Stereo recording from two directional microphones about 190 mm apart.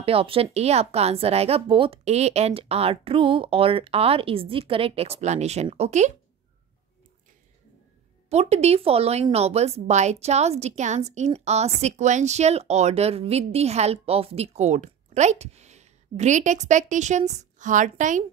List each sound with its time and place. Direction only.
0.0 s speech: 30° right (ahead or behind)
8.3 s speech: 35° right (ahead or behind)